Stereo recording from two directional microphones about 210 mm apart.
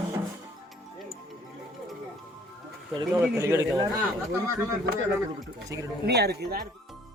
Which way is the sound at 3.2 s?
15° right (ahead or behind).